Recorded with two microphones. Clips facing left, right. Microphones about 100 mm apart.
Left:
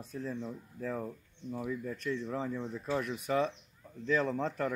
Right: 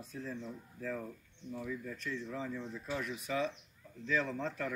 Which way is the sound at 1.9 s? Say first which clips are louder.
Left 5 dB; 45° left (ahead or behind).